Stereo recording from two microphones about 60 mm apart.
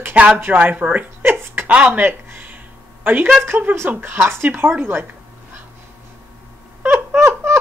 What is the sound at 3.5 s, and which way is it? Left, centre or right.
Speech, right.